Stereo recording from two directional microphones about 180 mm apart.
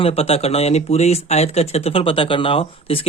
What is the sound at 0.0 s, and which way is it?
Speech, 30° left (ahead or behind).